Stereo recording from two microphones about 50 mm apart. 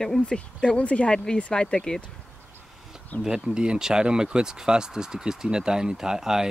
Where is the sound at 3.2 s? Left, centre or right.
Centre.